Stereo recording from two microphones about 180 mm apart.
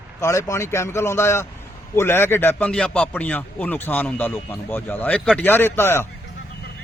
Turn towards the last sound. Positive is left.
turn(degrees=15)  # may be behind; listen again after turning